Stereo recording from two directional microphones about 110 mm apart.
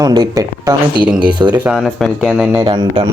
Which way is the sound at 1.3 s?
45° right (ahead or behind).